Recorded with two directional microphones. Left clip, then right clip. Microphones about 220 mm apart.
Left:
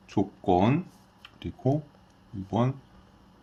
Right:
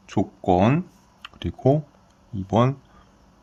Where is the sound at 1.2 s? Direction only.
55° right (ahead or behind).